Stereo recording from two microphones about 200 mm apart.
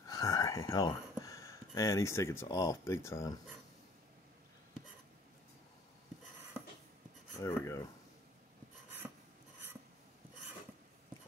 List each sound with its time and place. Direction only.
0.1 s speech: 20° left (ahead or behind)
7.3 s speech: 15° left (ahead or behind)